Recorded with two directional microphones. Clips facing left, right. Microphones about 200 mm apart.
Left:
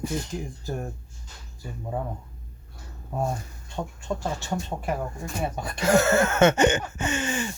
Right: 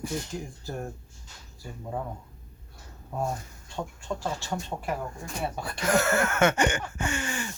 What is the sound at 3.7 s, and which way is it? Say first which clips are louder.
Speech: left 3 dB; 20° left (ahead or behind).